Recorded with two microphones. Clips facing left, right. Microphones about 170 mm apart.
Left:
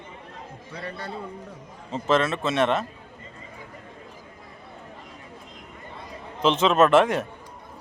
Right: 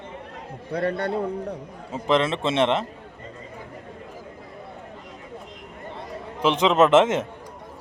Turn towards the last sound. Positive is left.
turn(degrees=-20)  # may be behind; listen again after turning